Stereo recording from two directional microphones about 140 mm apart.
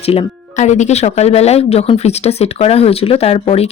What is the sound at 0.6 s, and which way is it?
Speech, 55° left (ahead or behind).